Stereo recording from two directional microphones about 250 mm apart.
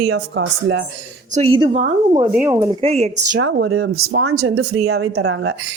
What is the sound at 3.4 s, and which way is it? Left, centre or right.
Speech, right.